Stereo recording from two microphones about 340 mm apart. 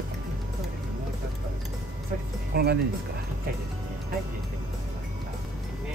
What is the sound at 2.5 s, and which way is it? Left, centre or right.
Speech, right.